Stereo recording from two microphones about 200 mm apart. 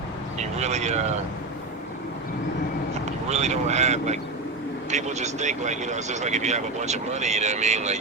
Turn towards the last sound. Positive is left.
turn(degrees=-35)  # may be behind; listen again after turning